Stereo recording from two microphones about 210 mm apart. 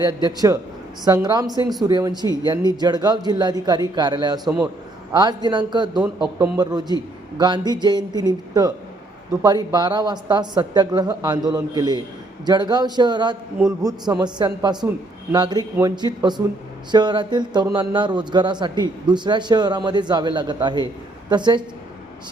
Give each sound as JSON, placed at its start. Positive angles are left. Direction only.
{"t": 0.0, "sound": "a man's voice", "side_deg": -20}